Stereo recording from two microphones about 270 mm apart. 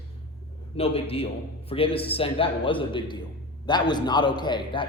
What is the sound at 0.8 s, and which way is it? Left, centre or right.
A man's voice, left.